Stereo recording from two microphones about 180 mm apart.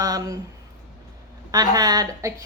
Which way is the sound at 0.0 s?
20° right (ahead or behind).